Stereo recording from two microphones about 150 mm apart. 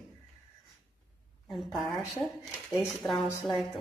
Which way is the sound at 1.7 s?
Centre (ahead or behind).